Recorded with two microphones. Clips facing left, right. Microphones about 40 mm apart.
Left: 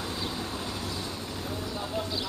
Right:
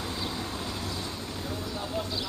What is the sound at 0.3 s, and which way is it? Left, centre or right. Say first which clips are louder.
Vehicle: even; centre.